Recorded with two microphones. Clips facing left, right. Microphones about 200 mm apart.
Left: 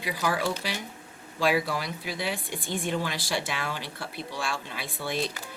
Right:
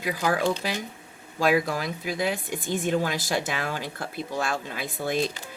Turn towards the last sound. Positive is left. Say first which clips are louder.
# right 5 dB
turn(degrees=-50)  # may be behind; listen again after turning